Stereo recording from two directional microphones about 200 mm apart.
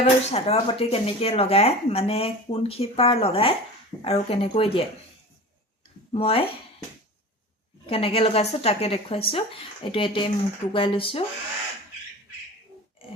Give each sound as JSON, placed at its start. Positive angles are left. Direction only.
{"t": 0.0, "sound": "speech", "side_deg": 30}
{"t": 6.1, "sound": "speech", "side_deg": 30}
{"t": 7.9, "sound": "speech", "side_deg": 30}